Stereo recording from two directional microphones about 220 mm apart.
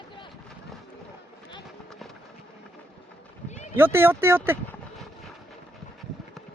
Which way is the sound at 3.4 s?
30° left (ahead or behind).